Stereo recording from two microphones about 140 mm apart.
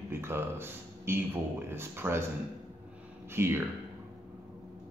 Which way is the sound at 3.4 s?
15° right (ahead or behind).